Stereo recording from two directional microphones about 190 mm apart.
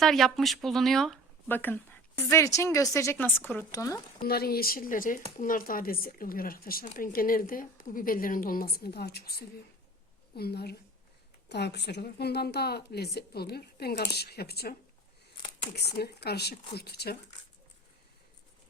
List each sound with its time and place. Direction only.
0.0 s speech: centre (ahead or behind); by 4.0 s 15° left (ahead or behind)
4.2 s a woman's voice: 55° left (ahead or behind)
10.3 s a woman's voice: 55° left (ahead or behind)